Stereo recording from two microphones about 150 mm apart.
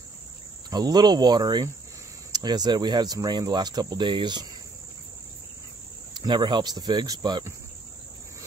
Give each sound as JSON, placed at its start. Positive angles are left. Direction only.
{"t": 0.7, "sound": "speech", "side_deg": -25}
{"t": 6.1, "sound": "speech", "side_deg": -30}